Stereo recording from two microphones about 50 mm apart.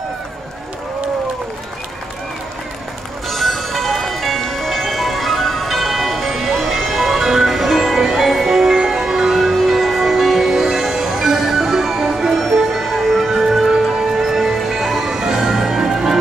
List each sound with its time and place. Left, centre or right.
3.3 s music: centre